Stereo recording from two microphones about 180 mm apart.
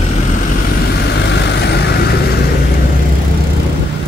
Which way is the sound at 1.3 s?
70° left (ahead or behind).